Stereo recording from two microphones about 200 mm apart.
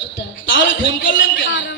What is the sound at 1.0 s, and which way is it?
Speech, 65° left (ahead or behind).